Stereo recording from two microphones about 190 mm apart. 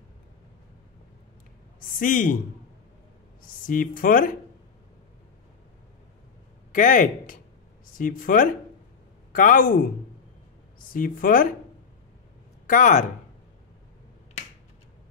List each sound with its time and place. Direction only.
1.8 s a man's voice: 45° left (ahead or behind)
3.6 s speech: 45° left (ahead or behind)
6.7 s a woman's voice: 45° left (ahead or behind)
10.9 s speech: 45° left (ahead or behind)
12.6 s speech: 45° left (ahead or behind)